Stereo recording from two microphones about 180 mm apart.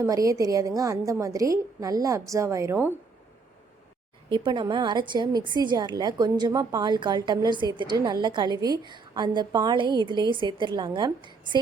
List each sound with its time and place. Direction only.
0.0 s a woman's voice: 20° right (ahead or behind)
4.3 s a woman's voice: 25° right (ahead or behind)